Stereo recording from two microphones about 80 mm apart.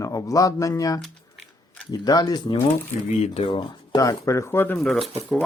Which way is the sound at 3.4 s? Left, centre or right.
Left.